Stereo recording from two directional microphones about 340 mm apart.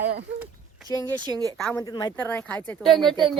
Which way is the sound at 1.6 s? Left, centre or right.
Centre.